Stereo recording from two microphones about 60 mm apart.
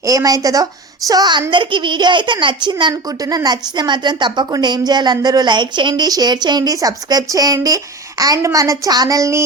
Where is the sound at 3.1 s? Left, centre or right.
Right.